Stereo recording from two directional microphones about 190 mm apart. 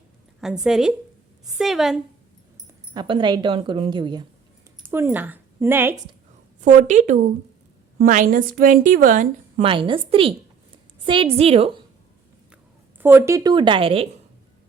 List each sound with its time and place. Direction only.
0.6 s a woman's voice: 5° right (ahead or behind)
2.9 s a woman's voice: 25° right (ahead or behind)
4.9 s speech: 10° right (ahead or behind)
6.6 s a woman's voice: 40° right (ahead or behind)
9.6 s a woman's voice: 25° right (ahead or behind)
13.0 s a woman's voice: 10° right (ahead or behind); by 14.1 s 30° right (ahead or behind)